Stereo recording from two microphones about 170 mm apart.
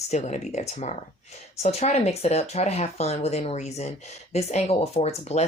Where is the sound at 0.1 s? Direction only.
45° left (ahead or behind).